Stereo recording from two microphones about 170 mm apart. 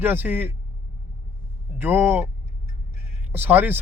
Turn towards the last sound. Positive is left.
turn(degrees=-10)  # may be behind; listen again after turning